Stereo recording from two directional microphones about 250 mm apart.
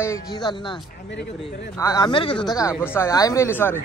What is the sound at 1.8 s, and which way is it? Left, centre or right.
Speech, centre.